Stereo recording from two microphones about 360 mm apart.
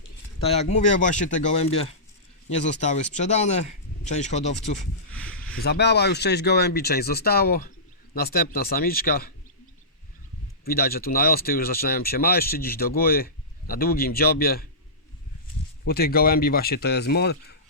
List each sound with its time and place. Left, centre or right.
0.3 s speech: centre
5.1 s a sound: centre
5.5 s speech: left
10.7 s speech: left
15.8 s speech: left